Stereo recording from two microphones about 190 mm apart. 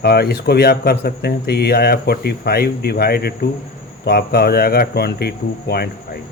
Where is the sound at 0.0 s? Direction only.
55° left (ahead or behind).